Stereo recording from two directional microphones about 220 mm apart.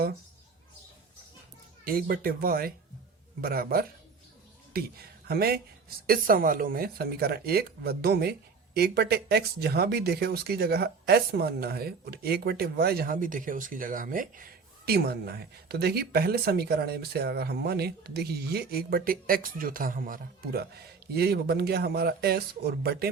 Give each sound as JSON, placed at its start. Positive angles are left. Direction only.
{"t": 1.8, "sound": "speech", "side_deg": -40}